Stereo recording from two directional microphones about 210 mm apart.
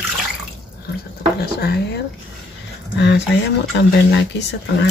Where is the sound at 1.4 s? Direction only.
50° left (ahead or behind).